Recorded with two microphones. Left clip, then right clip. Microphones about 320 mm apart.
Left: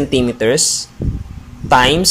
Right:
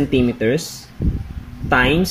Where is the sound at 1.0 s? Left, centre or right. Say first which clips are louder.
Left 1 dB; left.